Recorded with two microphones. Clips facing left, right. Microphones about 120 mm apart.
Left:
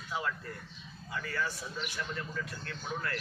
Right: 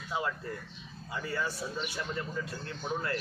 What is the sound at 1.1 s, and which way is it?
A man's voice, 25° right (ahead or behind).